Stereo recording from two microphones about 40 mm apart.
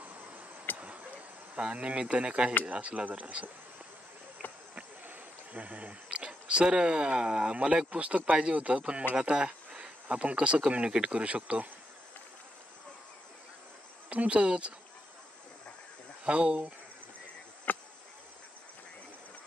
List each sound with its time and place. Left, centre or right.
0.0 s insect: right
0.7 s a sound: right
1.6 s speech: right
5.5 s a sound: right
6.6 s speech: right
14.0 s speech: right
16.3 s speech: right
17.7 s insect: left